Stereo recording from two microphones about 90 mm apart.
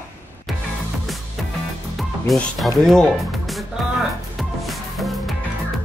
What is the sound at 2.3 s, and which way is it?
Speech, centre (ahead or behind).